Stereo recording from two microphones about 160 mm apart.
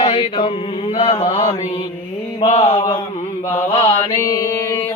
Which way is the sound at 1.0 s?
40° left (ahead or behind).